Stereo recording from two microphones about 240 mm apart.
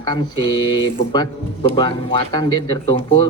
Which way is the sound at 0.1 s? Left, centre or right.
Left.